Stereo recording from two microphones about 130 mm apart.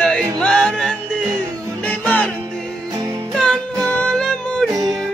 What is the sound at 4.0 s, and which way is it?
Music, 5° left (ahead or behind).